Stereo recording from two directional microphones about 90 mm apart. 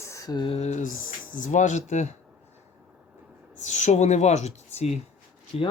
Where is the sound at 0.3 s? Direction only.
75° left (ahead or behind).